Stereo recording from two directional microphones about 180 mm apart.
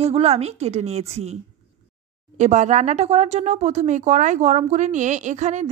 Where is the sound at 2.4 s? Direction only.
40° right (ahead or behind).